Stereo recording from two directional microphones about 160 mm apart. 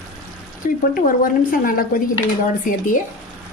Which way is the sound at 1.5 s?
60° left (ahead or behind).